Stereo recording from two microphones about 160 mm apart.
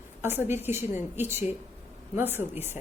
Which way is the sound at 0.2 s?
15° right (ahead or behind).